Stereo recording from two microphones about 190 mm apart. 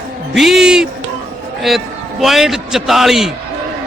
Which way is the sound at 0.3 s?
Centre (ahead or behind).